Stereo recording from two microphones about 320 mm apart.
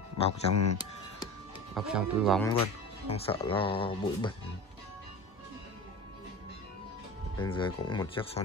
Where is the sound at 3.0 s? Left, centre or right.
Centre.